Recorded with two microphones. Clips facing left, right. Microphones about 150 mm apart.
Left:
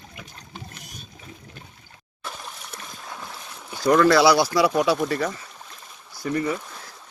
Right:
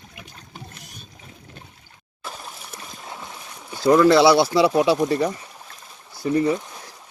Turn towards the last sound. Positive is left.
turn(degrees=-20)  # may be behind; listen again after turning